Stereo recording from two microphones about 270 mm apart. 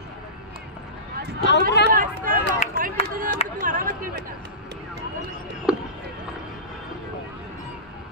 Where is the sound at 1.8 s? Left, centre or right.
Left.